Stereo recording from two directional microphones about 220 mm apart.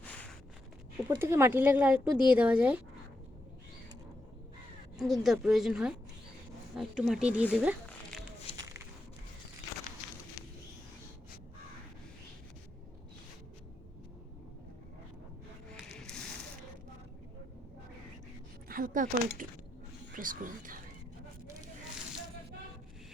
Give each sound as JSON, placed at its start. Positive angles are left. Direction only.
{"t": 1.0, "sound": "speech", "side_deg": -10}
{"t": 4.9, "sound": "a woman's voice", "side_deg": 0}
{"t": 8.5, "sound": "a sound", "side_deg": 25}
{"t": 18.7, "sound": "speech", "side_deg": -40}